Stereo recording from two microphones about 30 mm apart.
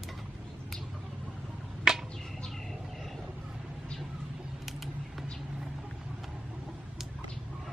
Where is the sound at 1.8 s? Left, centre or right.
Right.